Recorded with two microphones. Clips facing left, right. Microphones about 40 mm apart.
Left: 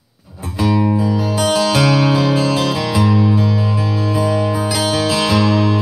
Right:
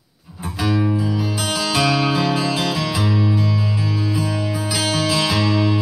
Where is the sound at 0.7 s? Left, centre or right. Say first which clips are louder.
Left 4 dB; left.